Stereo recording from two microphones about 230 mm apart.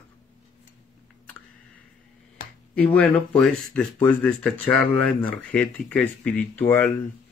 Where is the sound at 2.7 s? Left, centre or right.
Centre.